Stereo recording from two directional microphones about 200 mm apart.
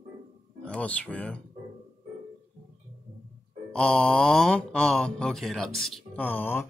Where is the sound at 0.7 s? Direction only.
5° left (ahead or behind).